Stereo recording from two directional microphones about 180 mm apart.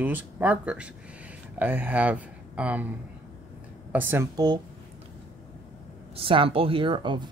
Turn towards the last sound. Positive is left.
turn(degrees=-25)  # may be behind; listen again after turning